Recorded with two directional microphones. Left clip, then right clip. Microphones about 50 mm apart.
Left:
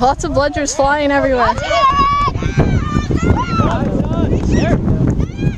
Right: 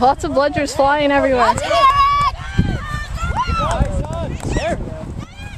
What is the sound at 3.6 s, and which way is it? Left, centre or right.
Clip-clop, right.